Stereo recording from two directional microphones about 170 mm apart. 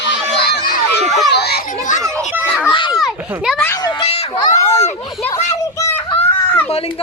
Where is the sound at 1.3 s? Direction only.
75° left (ahead or behind).